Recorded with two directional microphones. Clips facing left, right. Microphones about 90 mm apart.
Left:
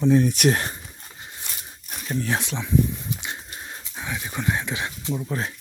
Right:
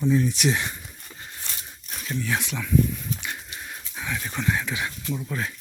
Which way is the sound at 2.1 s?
35° left (ahead or behind).